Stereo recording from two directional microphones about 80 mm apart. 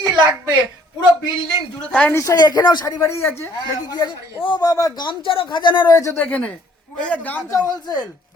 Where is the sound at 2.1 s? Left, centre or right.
Left.